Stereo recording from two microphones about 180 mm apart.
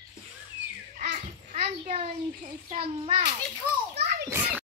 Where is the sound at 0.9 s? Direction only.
40° right (ahead or behind).